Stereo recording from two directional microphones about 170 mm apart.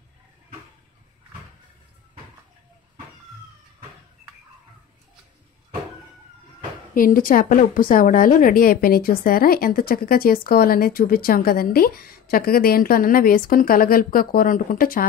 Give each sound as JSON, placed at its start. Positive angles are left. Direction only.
{"t": 6.9, "sound": "a woman's voice", "side_deg": 55}